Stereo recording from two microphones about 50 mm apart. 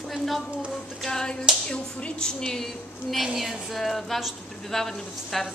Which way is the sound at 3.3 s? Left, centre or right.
Centre.